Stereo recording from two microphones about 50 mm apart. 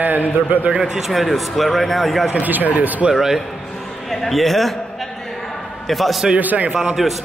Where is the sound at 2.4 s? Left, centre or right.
Right.